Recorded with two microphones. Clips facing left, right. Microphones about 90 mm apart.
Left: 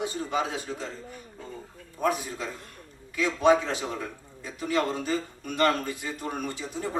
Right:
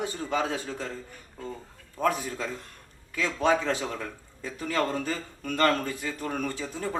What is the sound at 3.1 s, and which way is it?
Speech, 20° left (ahead or behind).